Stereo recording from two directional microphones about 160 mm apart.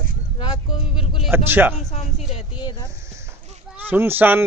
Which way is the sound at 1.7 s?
45° left (ahead or behind).